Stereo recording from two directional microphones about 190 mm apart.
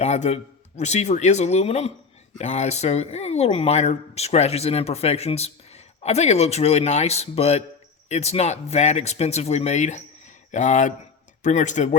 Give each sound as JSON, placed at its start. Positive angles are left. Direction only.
{"t": 0.0, "sound": "speech", "side_deg": 35}